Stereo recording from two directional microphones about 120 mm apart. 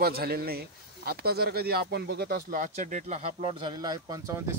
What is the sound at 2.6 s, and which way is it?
Speech, 90° right.